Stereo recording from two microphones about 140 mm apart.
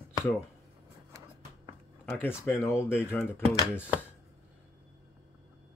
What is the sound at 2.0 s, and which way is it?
Speech, 10° left (ahead or behind).